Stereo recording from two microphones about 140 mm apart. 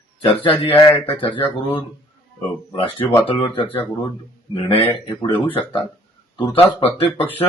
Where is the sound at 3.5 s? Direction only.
40° left (ahead or behind).